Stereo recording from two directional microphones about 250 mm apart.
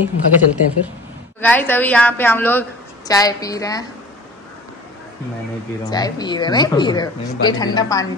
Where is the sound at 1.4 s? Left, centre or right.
Centre.